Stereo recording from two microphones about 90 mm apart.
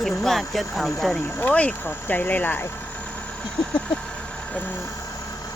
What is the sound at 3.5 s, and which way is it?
Vehicle, 10° left (ahead or behind).